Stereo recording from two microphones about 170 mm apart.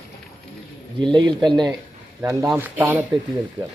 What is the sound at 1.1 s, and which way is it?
Speech, 25° right (ahead or behind).